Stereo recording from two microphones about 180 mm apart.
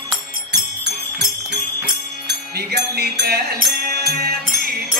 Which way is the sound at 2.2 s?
65° right (ahead or behind).